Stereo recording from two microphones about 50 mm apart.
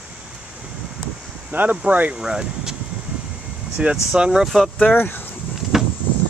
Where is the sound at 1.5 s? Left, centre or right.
Right.